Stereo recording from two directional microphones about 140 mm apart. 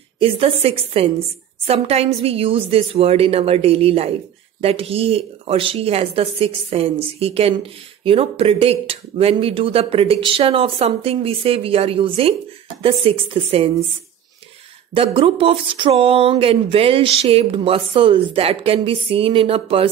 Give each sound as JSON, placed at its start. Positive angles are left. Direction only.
{"t": 0.2, "sound": "speech", "side_deg": -45}
{"t": 15.0, "sound": "speech", "side_deg": -40}